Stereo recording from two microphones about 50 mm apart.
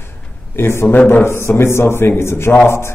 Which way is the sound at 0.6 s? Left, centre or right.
Left.